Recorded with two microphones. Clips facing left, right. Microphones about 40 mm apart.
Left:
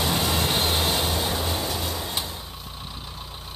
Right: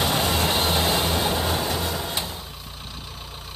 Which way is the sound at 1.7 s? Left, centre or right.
Centre.